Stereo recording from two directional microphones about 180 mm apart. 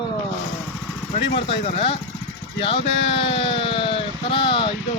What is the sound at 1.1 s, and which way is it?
Speech, 30° left (ahead or behind).